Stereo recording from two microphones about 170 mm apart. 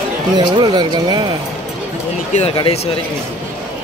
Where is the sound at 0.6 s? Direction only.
25° right (ahead or behind).